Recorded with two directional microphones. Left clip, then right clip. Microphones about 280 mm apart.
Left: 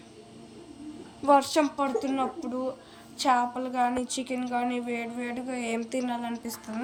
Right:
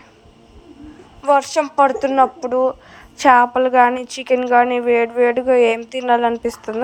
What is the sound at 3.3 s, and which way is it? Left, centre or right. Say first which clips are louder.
Speech: right 14 dB; right.